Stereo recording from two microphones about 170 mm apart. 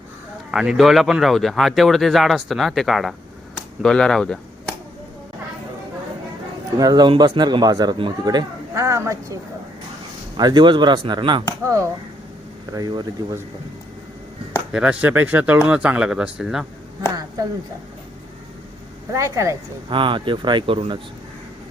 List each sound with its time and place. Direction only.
0.5 s speech: 5° right (ahead or behind)
6.7 s speech: 25° right (ahead or behind)
11.6 s speech: 15° right (ahead or behind)
14.7 s speech: 5° right (ahead or behind)
19.1 s speech: 20° right (ahead or behind)
19.9 s speech: 30° right (ahead or behind)